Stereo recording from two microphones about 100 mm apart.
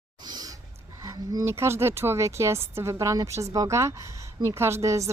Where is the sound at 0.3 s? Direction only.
45° right (ahead or behind).